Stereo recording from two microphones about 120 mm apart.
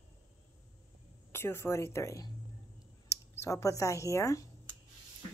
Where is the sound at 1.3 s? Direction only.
20° left (ahead or behind).